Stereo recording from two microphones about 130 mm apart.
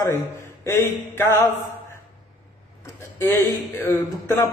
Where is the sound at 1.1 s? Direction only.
20° left (ahead or behind).